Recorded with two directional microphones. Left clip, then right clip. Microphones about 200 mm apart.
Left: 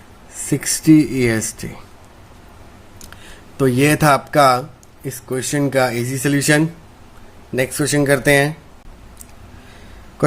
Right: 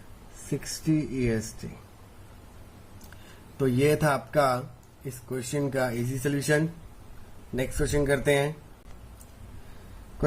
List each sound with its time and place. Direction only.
0.6 s speech: 45° left (ahead or behind)
3.6 s speech: 35° left (ahead or behind)